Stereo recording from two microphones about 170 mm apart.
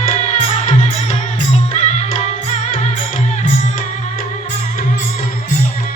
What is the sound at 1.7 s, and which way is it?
Music, 45° left (ahead or behind).